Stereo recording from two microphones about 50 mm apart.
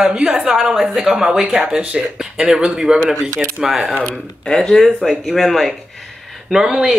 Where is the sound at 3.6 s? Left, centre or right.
Centre.